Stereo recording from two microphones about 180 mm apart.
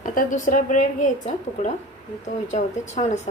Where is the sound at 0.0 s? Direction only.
45° left (ahead or behind).